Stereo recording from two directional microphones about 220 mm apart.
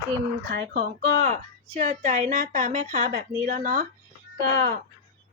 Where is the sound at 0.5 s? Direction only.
50° right (ahead or behind).